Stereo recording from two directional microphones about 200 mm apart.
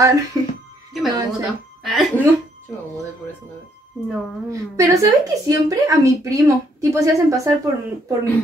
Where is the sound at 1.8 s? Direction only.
Centre (ahead or behind).